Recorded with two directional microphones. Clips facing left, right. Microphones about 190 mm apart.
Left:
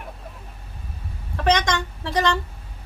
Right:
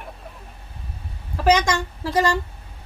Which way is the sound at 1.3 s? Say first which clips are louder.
Right 2 dB; 5° right (ahead or behind).